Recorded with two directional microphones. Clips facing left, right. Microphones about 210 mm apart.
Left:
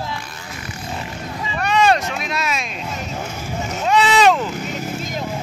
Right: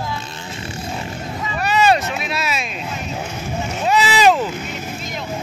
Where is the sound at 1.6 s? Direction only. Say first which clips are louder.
Even; 5° right (ahead or behind).